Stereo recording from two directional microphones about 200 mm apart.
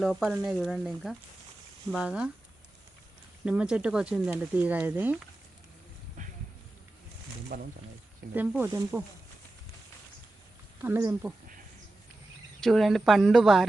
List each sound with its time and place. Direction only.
0.0 s speech: centre (ahead or behind)
3.4 s speech: 5° right (ahead or behind)
7.5 s speech: 45° right (ahead or behind)
8.4 s speech: 10° right (ahead or behind)
10.8 s speech: 10° right (ahead or behind)
12.5 s speech: centre (ahead or behind)